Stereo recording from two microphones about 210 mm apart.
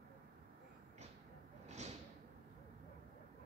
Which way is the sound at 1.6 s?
35° right (ahead or behind).